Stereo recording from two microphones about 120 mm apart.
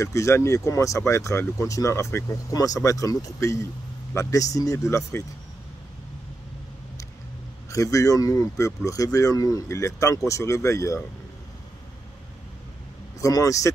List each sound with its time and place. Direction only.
0.0 s speech: 25° left (ahead or behind)
7.7 s speech: 25° left (ahead or behind)
13.2 s speech: 30° left (ahead or behind)